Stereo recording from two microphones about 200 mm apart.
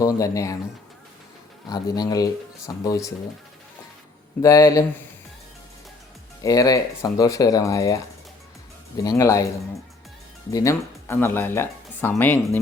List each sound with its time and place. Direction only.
0.0 s speech: 15° left (ahead or behind)
1.7 s speech: 20° left (ahead or behind)
4.4 s speech: 15° left (ahead or behind)
6.4 s speech: 20° left (ahead or behind)
9.0 s speech: 15° left (ahead or behind)
10.5 s speech: 15° left (ahead or behind)